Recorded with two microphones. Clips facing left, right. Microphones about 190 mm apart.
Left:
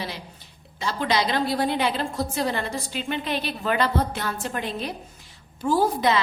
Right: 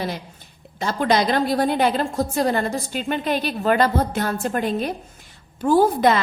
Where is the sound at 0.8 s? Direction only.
45° right (ahead or behind).